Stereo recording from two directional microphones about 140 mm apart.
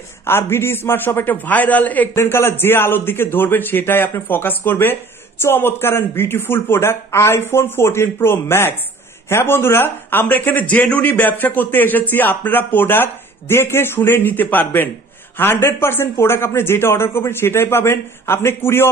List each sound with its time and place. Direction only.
0.3 s speech: 15° left (ahead or behind)